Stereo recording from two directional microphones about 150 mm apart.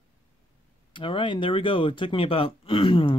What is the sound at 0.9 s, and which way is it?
Speech, 35° left (ahead or behind).